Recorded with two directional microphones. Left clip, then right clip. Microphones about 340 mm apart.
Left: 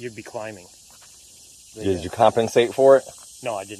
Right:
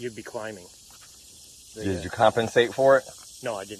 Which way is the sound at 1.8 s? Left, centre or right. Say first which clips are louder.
Left 4 dB; left.